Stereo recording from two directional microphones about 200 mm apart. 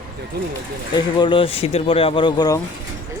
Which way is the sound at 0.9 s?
25° left (ahead or behind).